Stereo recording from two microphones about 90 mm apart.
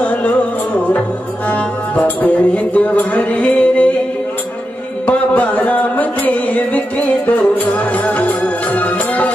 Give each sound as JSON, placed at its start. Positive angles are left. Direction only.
{"t": 0.0, "sound": "music", "side_deg": 15}
{"t": 1.5, "sound": "music", "side_deg": 15}
{"t": 5.0, "sound": "music", "side_deg": 15}